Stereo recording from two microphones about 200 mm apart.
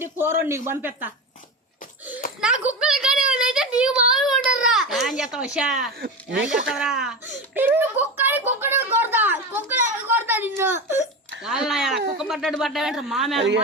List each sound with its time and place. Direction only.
0.0 s a man's voice: 10° right (ahead or behind)
2.4 s a sound: 5° right (ahead or behind)
4.5 s baby cry: centre (ahead or behind)
6.4 s a child's voice: 5° right (ahead or behind)
10.8 s speech: 35° left (ahead or behind)
11.4 s speech: 5° right (ahead or behind)